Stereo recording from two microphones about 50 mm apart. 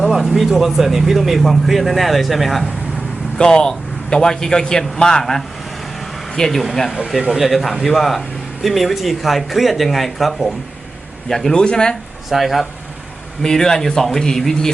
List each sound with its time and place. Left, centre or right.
0.0 s speech: centre
3.3 s a man's voice: centre
11.5 s speech: centre
12.3 s speech: centre
13.4 s a man's voice: centre